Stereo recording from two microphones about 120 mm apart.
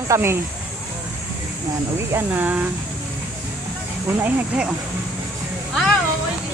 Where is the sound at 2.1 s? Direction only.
15° right (ahead or behind).